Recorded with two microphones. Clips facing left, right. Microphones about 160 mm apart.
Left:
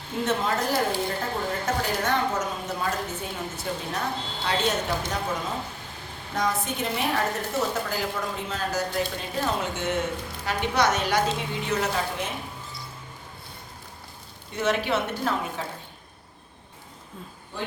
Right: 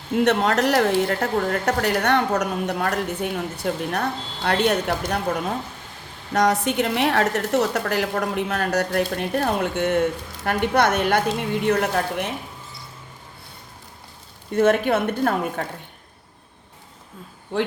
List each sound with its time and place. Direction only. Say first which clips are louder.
0.3 s speech: right 5 dB; 70° right (ahead or behind)
6.3 s a woman's voice: right 8 dB; 75° right (ahead or behind)
14.5 s a woman's voice: right 7 dB; 50° right (ahead or behind)